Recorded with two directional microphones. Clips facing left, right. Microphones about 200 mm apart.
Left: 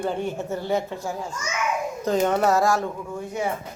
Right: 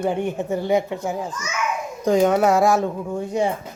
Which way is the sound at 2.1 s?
10° right (ahead or behind).